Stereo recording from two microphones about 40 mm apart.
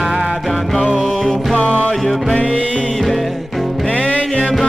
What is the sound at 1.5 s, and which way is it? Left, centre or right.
Music, left.